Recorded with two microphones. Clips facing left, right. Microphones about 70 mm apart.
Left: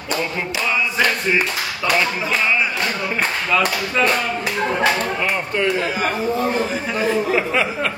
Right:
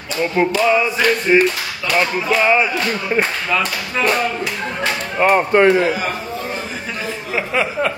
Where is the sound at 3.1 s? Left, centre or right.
Centre.